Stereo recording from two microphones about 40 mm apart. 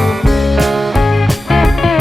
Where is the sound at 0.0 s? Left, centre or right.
Centre.